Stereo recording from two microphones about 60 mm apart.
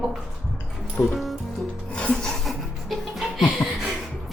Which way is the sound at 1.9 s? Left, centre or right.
Centre.